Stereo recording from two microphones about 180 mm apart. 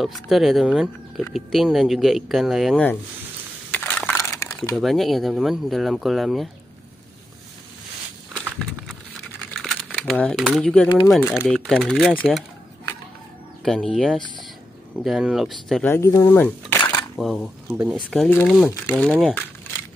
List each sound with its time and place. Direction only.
0.0 s speech: centre (ahead or behind)
3.7 s crushing: 5° left (ahead or behind)
4.7 s speech: centre (ahead or behind)
8.3 s walk: centre (ahead or behind)
9.5 s a sound: 5° left (ahead or behind)
10.4 s speech: centre (ahead or behind)
13.7 s speech: 5° left (ahead or behind)
15.9 s speech: 15° left (ahead or behind)